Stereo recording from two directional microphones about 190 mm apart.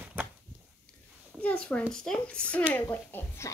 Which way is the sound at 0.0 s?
10° right (ahead or behind).